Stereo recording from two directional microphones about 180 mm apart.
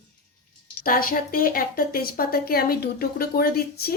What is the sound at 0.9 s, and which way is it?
Speech, 50° left (ahead or behind).